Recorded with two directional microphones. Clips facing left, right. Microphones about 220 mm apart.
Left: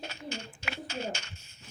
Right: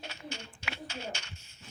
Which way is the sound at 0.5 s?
45° left (ahead or behind).